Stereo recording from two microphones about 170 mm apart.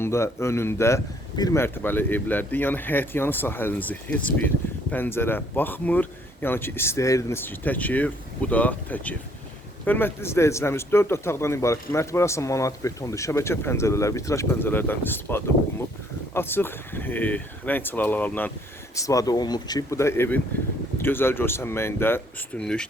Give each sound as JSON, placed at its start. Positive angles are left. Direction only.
{"t": 0.0, "sound": "speech", "side_deg": 15}